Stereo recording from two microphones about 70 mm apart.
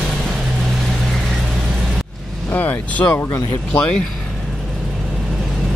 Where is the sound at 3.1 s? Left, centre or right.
Left.